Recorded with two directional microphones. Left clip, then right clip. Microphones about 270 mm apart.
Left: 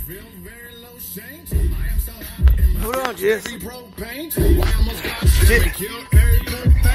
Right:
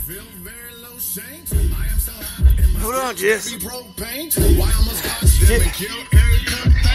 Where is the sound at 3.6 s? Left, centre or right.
Right.